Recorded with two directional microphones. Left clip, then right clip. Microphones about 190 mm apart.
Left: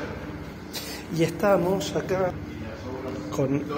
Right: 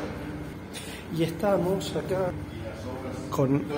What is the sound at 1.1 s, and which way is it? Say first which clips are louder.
Speech: left 4 dB; 5° left (ahead or behind).